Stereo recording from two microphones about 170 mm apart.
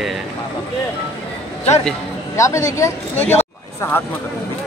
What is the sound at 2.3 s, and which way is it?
Speech, 20° left (ahead or behind).